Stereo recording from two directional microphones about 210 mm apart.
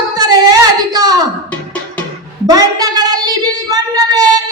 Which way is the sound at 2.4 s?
20° right (ahead or behind).